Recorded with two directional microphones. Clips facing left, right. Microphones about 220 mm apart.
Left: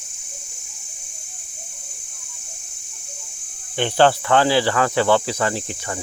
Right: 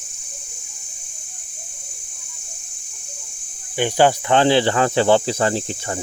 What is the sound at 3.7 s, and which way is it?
Speech, 10° right (ahead or behind).